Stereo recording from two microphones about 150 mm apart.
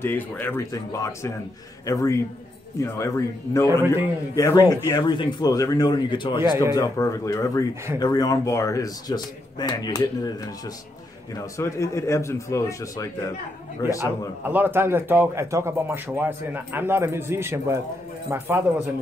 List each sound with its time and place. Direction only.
0.0 s a man's voice: 15° left (ahead or behind)
11.3 s a man's voice: 20° left (ahead or behind)
14.5 s a man's voice: 15° right (ahead or behind)